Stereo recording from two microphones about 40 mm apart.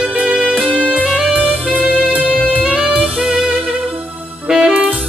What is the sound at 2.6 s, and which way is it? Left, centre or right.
Saxophone, right.